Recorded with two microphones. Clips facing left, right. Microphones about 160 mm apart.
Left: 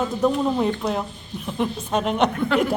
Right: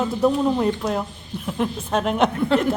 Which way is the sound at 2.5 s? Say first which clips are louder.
Right 1 dB; 30° right (ahead or behind).